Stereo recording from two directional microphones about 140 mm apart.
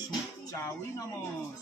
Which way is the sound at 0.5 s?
20° left (ahead or behind).